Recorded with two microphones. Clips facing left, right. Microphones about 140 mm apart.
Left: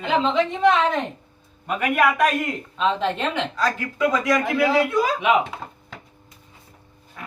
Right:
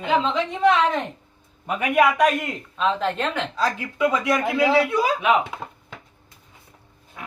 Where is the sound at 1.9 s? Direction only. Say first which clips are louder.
Right 2 dB; 15° right (ahead or behind).